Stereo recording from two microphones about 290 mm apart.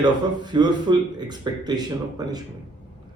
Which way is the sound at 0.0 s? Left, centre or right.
Centre.